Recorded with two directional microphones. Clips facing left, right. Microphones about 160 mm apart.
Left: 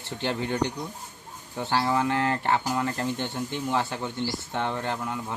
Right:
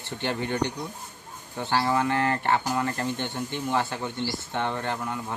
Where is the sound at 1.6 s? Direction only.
5° left (ahead or behind).